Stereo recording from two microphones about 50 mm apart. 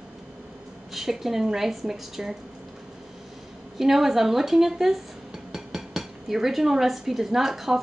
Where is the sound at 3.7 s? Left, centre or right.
Centre.